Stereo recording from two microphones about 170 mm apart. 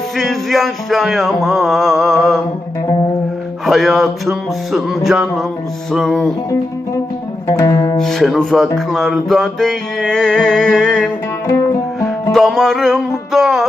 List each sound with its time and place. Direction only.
0.2 s mantra: centre (ahead or behind)
3.7 s mantra: centre (ahead or behind)
7.4 s music: 20° left (ahead or behind)
7.9 s mantra: centre (ahead or behind)
12.3 s mantra: centre (ahead or behind)